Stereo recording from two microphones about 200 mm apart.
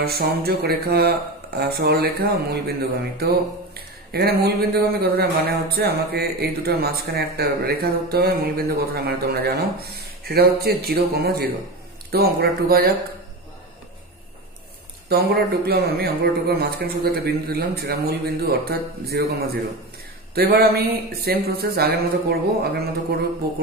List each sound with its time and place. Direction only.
0.0 s speech: 50° right (ahead or behind)
15.0 s speech: 50° right (ahead or behind)
20.3 s speech: 50° right (ahead or behind)